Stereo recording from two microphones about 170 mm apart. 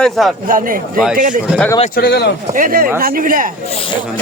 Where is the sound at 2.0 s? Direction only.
70° left (ahead or behind).